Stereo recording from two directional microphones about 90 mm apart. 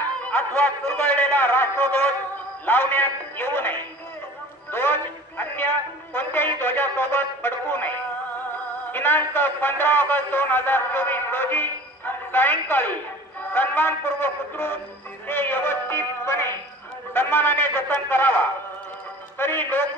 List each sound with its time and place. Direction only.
0.3 s a man's voice: 15° left (ahead or behind)
8.9 s a man's voice: 20° left (ahead or behind)
19.3 s a man's voice: 25° left (ahead or behind)